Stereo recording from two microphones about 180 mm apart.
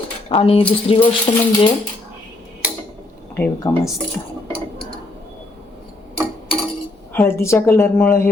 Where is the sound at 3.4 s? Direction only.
10° left (ahead or behind).